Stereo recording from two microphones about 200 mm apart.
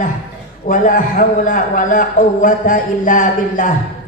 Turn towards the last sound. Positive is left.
turn(degrees=40)  # may be behind; listen again after turning